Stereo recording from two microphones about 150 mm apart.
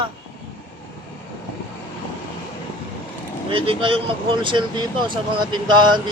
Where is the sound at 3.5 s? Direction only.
35° right (ahead or behind).